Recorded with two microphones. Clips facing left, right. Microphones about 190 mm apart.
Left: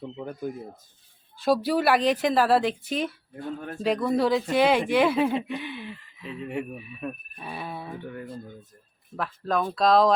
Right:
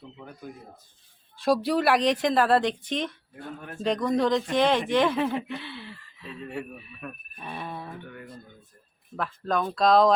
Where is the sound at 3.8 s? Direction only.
5° left (ahead or behind).